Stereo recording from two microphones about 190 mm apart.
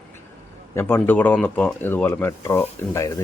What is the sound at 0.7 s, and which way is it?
Speech, 10° left (ahead or behind).